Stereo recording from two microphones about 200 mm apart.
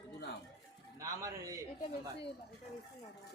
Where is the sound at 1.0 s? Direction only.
15° right (ahead or behind).